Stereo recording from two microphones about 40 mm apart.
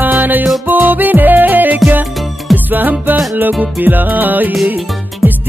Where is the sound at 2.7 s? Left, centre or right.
Right.